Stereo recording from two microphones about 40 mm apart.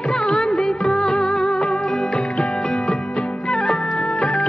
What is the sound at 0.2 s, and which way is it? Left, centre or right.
Music, centre.